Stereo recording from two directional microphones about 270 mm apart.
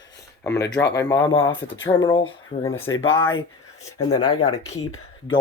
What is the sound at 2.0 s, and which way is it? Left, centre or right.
Speech, centre.